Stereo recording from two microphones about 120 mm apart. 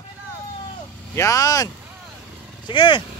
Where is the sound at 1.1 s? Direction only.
25° left (ahead or behind).